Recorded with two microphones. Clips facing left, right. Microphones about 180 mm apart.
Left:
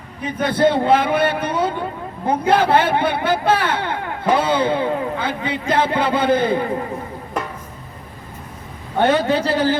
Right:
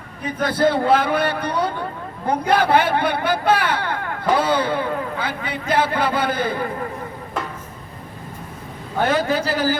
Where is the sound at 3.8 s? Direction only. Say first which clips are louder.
Left 1 dB; 20° left (ahead or behind).